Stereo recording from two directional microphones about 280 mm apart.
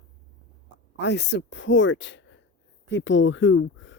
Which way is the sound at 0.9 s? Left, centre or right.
Left.